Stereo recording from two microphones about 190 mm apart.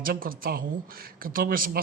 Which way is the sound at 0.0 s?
50° right (ahead or behind).